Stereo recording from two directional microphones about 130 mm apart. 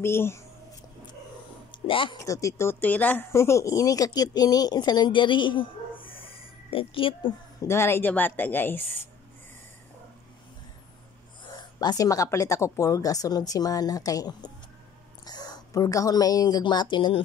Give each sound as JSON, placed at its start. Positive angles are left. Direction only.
{"t": 0.0, "sound": "a woman's voice", "side_deg": 20}
{"t": 1.7, "sound": "a sound", "side_deg": 40}
{"t": 2.1, "sound": "speech", "side_deg": 25}
{"t": 7.6, "sound": "a woman's voice", "side_deg": 20}
{"t": 11.8, "sound": "a woman's voice", "side_deg": 30}